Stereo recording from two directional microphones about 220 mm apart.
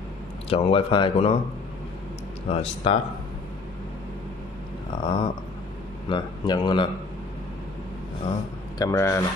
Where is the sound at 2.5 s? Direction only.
25° left (ahead or behind).